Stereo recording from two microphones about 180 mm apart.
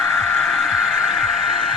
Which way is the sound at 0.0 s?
Centre (ahead or behind).